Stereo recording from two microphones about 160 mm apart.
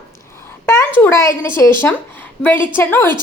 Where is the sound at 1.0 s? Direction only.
15° left (ahead or behind).